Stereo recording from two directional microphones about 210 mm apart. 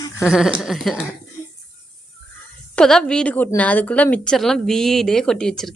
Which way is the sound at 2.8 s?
5° left (ahead or behind).